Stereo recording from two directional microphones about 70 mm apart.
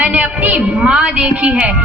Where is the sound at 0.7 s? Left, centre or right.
Centre.